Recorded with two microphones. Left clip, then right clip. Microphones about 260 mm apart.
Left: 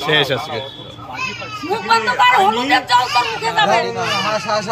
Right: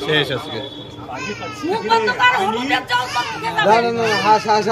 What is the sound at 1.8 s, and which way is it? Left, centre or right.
Speech, centre.